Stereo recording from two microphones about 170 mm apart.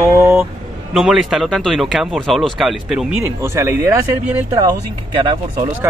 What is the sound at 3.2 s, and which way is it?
Speech, 15° right (ahead or behind).